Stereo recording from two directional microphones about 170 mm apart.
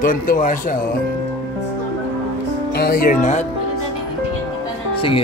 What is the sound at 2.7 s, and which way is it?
Speech, 60° left (ahead or behind).